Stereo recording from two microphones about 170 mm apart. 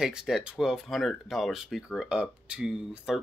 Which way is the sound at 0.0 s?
5° right (ahead or behind).